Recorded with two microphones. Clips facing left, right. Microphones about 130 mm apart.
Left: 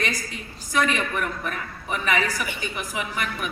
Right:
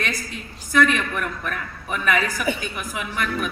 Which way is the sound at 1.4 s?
55° right (ahead or behind).